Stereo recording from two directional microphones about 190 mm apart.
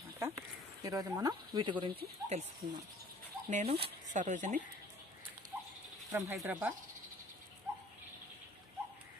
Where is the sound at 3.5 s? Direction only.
30° right (ahead or behind).